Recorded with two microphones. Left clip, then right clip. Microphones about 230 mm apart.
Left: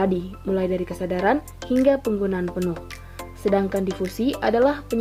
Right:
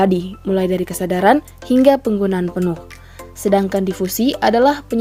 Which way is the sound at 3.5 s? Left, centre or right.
Right.